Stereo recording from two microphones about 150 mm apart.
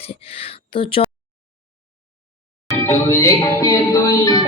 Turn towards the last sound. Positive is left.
turn(degrees=25)  # may be behind; listen again after turning